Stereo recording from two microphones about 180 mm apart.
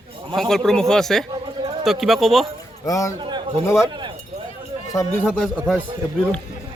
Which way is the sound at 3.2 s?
25° right (ahead or behind).